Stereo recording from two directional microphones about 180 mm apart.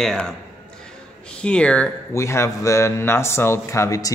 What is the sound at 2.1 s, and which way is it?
Speech, 15° left (ahead or behind).